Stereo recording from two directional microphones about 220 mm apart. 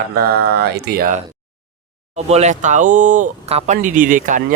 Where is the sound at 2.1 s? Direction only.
30° right (ahead or behind).